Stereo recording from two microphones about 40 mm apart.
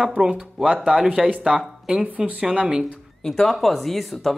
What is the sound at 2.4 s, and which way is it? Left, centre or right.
Speech, right.